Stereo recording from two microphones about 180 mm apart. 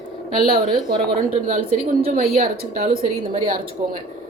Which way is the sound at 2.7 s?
55° right (ahead or behind).